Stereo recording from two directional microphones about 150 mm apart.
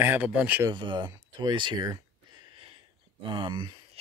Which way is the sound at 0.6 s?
30° right (ahead or behind).